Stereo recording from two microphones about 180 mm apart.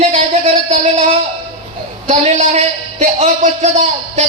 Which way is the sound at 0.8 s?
35° right (ahead or behind).